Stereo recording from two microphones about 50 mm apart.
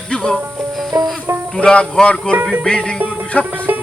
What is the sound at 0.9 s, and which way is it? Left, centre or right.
Music, right.